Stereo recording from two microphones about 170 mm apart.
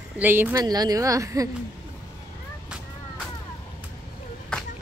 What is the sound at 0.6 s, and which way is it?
Speech, 20° right (ahead or behind).